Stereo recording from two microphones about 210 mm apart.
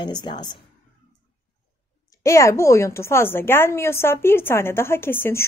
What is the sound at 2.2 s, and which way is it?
Speech, 15° left (ahead or behind).